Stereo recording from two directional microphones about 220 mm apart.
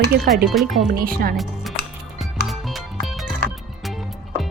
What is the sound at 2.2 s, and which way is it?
Music, centre (ahead or behind).